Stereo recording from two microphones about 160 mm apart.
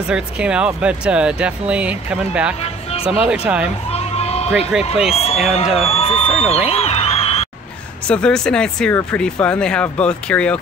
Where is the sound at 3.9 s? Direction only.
40° left (ahead or behind).